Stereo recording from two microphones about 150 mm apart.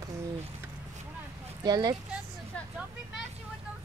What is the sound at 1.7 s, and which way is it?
Speech, 30° right (ahead or behind).